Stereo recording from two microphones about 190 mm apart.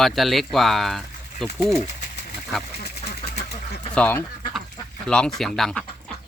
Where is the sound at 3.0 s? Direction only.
30° left (ahead or behind).